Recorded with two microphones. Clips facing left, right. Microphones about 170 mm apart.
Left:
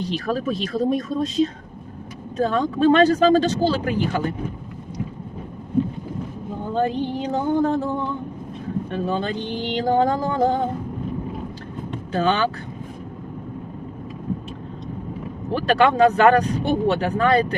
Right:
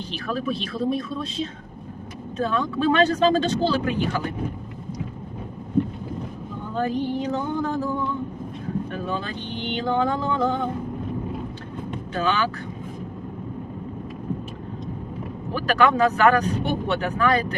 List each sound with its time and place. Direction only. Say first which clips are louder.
0.0 s speech: left 4 dB; 40° left (ahead or behind)
6.7 s a sound: left 1 dB; 30° left (ahead or behind)
8.9 s speech: left 5 dB; 30° left (ahead or behind)
12.1 s speech: left 4 dB; 30° left (ahead or behind)
15.5 s speech: left 3 dB; 30° left (ahead or behind)